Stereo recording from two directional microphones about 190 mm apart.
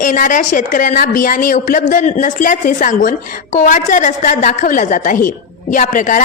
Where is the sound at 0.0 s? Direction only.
45° left (ahead or behind).